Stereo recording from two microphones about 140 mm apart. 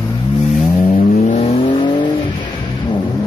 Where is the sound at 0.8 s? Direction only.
85° left.